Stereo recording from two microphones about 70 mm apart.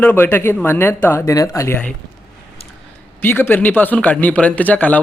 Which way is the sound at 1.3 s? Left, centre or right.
Left.